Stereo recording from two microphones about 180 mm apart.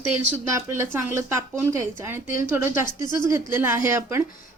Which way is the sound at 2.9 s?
25° left (ahead or behind).